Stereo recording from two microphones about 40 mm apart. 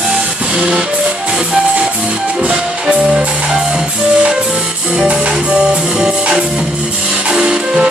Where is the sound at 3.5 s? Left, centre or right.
Centre.